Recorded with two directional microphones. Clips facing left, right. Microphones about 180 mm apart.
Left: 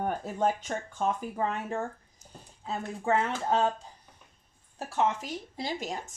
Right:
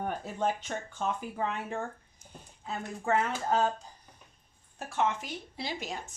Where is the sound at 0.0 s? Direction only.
45° left (ahead or behind).